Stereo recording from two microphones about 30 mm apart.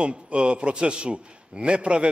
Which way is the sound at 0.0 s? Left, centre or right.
Right.